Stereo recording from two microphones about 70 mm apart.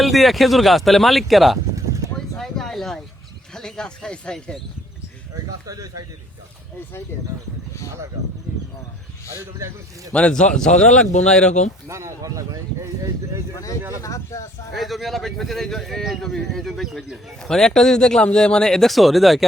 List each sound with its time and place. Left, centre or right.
0.0 s speech: centre
1.7 s a sound: right
2.1 s a sound: centre
3.5 s a man's voice: centre
5.5 s speech: right
9.3 s speech: right
10.1 s a man's voice: centre
11.9 s speech: right
14.0 s speech: left
14.7 s speech: centre